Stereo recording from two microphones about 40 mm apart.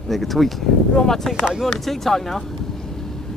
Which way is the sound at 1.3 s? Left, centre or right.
Centre.